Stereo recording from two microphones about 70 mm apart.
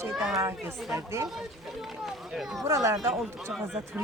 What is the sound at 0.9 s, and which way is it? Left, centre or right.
Speech, right.